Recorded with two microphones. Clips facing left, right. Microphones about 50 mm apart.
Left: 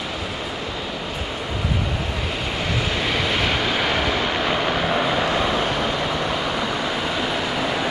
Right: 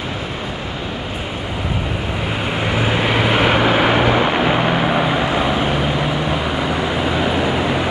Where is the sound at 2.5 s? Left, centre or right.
Right.